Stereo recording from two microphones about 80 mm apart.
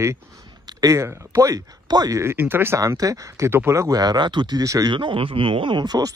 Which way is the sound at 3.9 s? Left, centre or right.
Right.